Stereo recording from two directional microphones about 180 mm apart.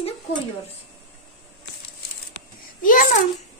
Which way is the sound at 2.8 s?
50° left (ahead or behind).